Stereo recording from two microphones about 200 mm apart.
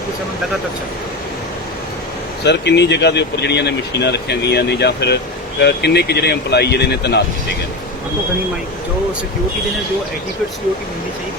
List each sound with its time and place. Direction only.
2.4 s speech: 60° left (ahead or behind)